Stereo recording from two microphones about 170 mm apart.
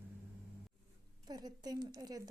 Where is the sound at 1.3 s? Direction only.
25° right (ahead or behind).